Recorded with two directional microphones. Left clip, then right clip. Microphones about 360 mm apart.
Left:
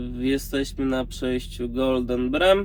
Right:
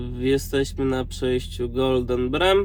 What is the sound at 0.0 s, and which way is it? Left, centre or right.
Speech, centre.